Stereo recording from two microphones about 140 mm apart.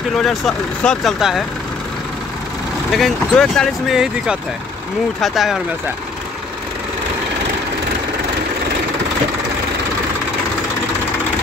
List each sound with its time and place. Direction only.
0.1 s speech: centre (ahead or behind)
2.9 s speech: centre (ahead or behind)